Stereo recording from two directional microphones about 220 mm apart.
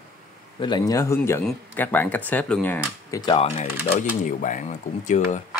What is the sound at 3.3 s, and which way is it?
Speech, 25° left (ahead or behind).